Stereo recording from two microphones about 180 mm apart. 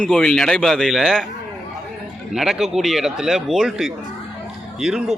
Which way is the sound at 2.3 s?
Centre (ahead or behind).